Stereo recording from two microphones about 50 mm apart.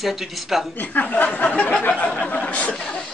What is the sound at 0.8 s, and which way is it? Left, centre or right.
Speech, left.